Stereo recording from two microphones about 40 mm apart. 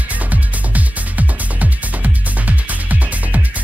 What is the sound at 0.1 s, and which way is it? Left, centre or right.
Music, right.